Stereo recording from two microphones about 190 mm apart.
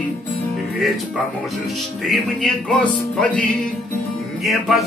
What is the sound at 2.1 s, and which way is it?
Music, 5° left (ahead or behind).